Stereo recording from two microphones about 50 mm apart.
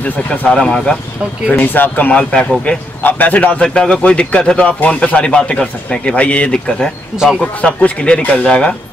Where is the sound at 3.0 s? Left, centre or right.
Left.